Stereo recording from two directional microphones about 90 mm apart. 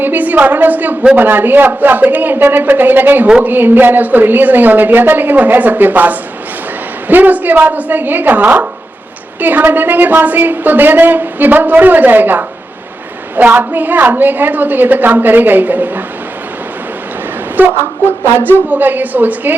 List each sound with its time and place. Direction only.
0.0 s speech: 20° right (ahead or behind)
17.7 s speech: 30° left (ahead or behind)
18.5 s speech: 20° right (ahead or behind)